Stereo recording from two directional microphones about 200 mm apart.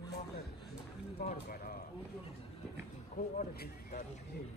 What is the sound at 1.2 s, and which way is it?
Speech, 45° left (ahead or behind).